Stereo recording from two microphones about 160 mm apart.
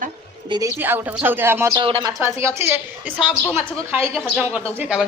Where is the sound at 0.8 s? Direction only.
10° right (ahead or behind).